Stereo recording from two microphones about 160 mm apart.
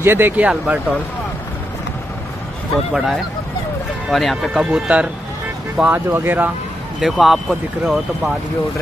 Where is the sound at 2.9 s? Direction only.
Centre (ahead or behind).